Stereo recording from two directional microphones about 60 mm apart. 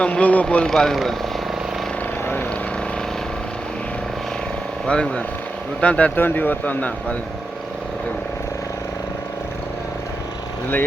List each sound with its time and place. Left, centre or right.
0.0 s speech: left
4.9 s speech: centre
6.1 s speech: left